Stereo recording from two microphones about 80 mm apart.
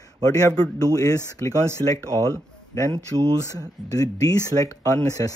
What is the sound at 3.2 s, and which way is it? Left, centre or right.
Speech, right.